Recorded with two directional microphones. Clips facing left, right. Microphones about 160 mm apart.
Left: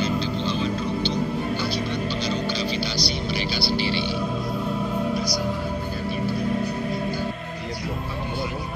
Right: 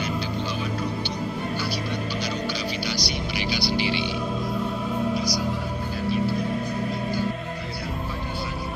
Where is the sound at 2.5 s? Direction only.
15° right (ahead or behind).